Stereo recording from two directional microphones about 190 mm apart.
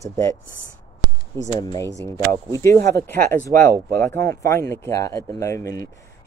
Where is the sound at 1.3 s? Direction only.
15° left (ahead or behind).